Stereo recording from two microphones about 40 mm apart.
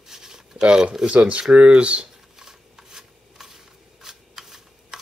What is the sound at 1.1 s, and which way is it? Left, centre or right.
Speech, right.